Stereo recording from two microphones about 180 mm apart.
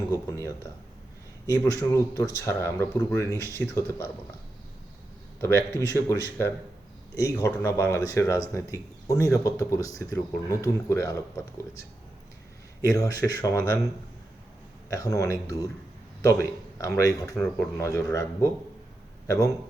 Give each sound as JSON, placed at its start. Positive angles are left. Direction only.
{"t": 0.1, "sound": "speech", "side_deg": 15}
{"t": 5.4, "sound": "speech", "side_deg": 15}
{"t": 7.2, "sound": "speech", "side_deg": 15}
{"t": 12.9, "sound": "a man's voice", "side_deg": 20}
{"t": 14.8, "sound": "a man's voice", "side_deg": 15}
{"t": 17.3, "sound": "speech", "side_deg": 5}
{"t": 17.8, "sound": "speech", "side_deg": 20}